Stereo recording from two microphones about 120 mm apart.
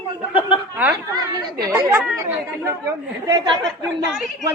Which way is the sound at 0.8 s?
15° right (ahead or behind).